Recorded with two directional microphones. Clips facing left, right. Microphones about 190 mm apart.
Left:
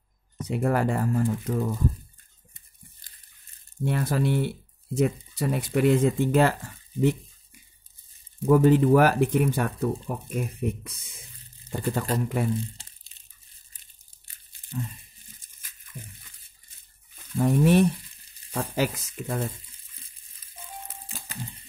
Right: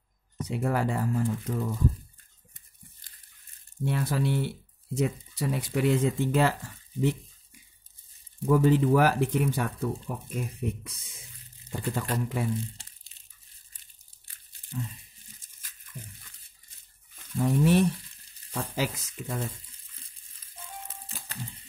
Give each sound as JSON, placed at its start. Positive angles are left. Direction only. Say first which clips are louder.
{"t": 0.5, "sound": "speech", "louder": "left 4 dB", "side_deg": 55}
{"t": 3.8, "sound": "speech", "louder": "left 3 dB", "side_deg": 50}
{"t": 8.5, "sound": "speech", "louder": "left 4 dB", "side_deg": 55}
{"t": 17.4, "sound": "speech", "louder": "left 3 dB", "side_deg": 55}